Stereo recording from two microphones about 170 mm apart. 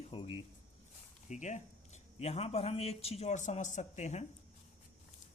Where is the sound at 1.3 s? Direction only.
45° left (ahead or behind).